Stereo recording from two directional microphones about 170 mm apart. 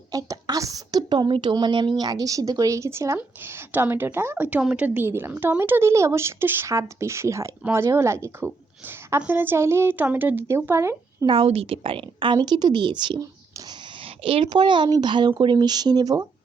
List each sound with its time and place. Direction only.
0.1 s a woman's voice: 20° right (ahead or behind)
11.3 s a woman's voice: 35° right (ahead or behind)
14.3 s a woman's voice: 30° right (ahead or behind)